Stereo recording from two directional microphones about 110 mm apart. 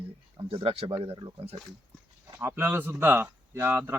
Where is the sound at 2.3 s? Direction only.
20° right (ahead or behind).